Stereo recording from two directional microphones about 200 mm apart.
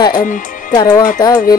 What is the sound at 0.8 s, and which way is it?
Speech, 20° left (ahead or behind).